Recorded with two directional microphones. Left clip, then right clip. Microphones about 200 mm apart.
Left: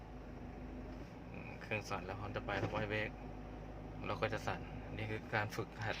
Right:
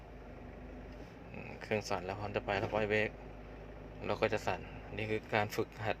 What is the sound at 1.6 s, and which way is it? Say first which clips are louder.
Speech: right 6 dB; 20° right (ahead or behind).